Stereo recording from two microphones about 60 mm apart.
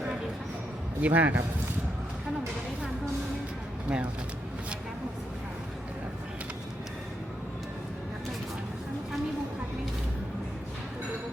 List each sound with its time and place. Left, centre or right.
1.0 s a man's voice: right
3.8 s a man's voice: right